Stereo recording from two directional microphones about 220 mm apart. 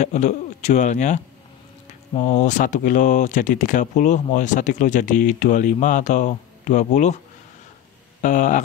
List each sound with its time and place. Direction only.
0.0 s a man's voice: 30° left (ahead or behind)
8.2 s speech: 35° left (ahead or behind)